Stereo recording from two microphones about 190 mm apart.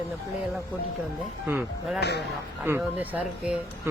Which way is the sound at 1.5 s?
10° right (ahead or behind).